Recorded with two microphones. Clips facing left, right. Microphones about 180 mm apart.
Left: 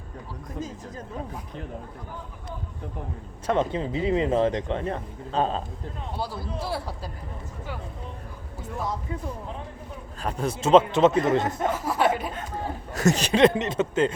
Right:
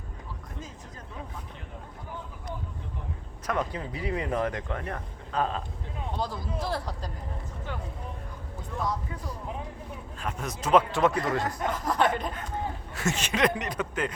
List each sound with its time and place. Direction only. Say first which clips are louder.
0.6 s speech: left 8 dB; 40° left (ahead or behind)
3.4 s speech: left 6 dB; 25° left (ahead or behind)
6.1 s a man's voice: left 1 dB; 5° left (ahead or behind)
10.2 s speech: left 7 dB; 35° left (ahead or behind)
11.7 s a man's voice: even; 10° left (ahead or behind)
12.9 s speech: left 9 dB; 40° left (ahead or behind)